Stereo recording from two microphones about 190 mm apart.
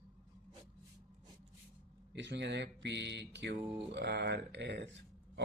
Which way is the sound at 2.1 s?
70° right (ahead or behind).